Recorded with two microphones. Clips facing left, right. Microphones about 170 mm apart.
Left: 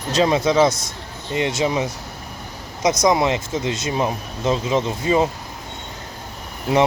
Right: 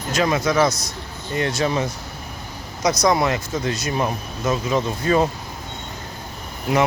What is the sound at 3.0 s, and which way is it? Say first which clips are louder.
Speech: left 1 dB; 20° left (ahead or behind).